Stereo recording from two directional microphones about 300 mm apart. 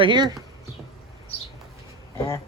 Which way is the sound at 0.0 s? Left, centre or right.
Centre.